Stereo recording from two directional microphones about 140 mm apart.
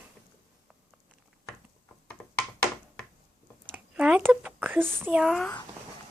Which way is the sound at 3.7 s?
10° right (ahead or behind).